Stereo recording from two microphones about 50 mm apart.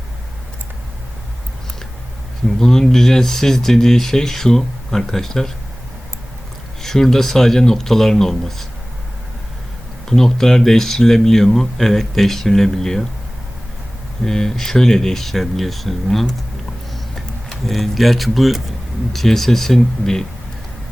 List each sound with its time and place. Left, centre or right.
2.6 s speech: centre
6.8 s speech: centre
10.1 s speech: centre
14.3 s speech: centre
17.7 s speech: centre